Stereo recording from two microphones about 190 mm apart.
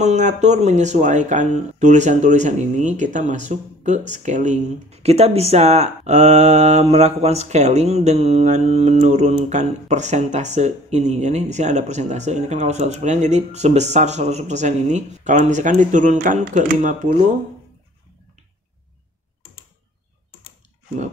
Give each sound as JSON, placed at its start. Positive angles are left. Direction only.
{"t": 0.0, "sound": "speech", "side_deg": -40}